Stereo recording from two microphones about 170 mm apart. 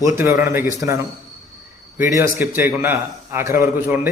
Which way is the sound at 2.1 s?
15° right (ahead or behind).